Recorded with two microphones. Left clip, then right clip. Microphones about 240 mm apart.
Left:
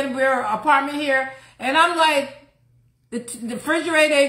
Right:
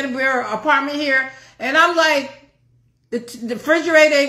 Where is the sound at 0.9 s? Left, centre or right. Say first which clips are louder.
Right 3 dB; left.